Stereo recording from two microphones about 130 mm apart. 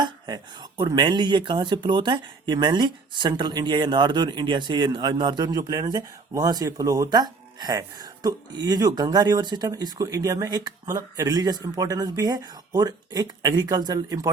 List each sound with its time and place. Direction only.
0.0 s speech: 35° right (ahead or behind)